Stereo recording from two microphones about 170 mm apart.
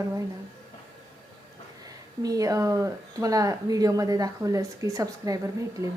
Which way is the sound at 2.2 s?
20° right (ahead or behind).